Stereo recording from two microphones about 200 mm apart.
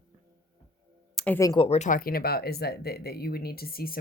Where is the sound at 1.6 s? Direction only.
30° left (ahead or behind).